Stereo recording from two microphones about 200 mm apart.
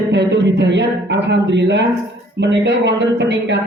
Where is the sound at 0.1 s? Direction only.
60° right (ahead or behind).